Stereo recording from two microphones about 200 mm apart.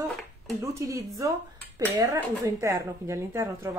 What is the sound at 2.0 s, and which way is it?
Speech, 15° right (ahead or behind).